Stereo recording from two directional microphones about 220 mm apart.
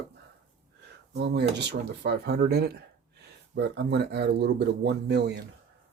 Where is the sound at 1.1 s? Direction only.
50° right (ahead or behind).